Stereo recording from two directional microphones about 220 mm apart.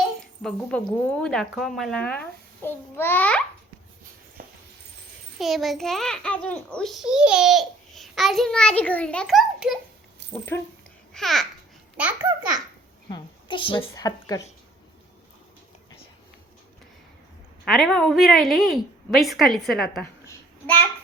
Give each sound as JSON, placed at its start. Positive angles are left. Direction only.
{"t": 0.4, "sound": "a child's voice", "side_deg": 5}
{"t": 5.4, "sound": "a child's voice", "side_deg": 0}
{"t": 11.1, "sound": "a child's voice", "side_deg": 0}
{"t": 13.1, "sound": "a woman's voice", "side_deg": 20}
{"t": 17.7, "sound": "a child's voice", "side_deg": 0}